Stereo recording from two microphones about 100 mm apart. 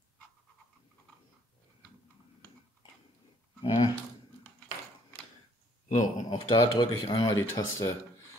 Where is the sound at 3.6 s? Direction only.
45° left (ahead or behind).